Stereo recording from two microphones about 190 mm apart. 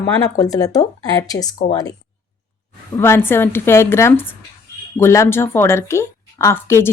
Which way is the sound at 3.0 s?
10° left (ahead or behind).